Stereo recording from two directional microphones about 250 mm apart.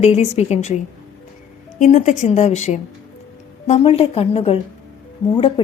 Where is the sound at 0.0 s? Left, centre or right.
Left.